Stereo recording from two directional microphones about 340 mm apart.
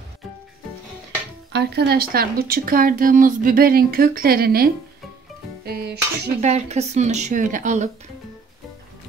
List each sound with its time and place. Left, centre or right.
1.5 s speech: right
5.7 s speech: right